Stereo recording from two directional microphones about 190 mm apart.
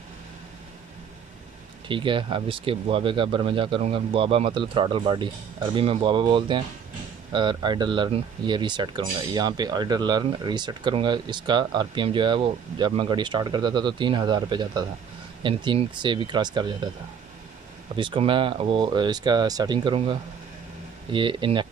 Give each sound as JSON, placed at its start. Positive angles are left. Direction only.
{"t": 1.9, "sound": "speech", "side_deg": -25}
{"t": 17.9, "sound": "speech", "side_deg": -25}